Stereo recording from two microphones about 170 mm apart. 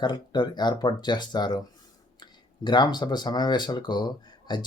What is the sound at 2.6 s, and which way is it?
Speech, 25° left (ahead or behind).